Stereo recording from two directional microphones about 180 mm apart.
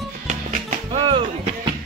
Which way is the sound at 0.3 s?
40° right (ahead or behind).